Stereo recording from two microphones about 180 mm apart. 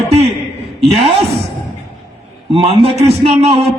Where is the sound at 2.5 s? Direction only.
35° right (ahead or behind).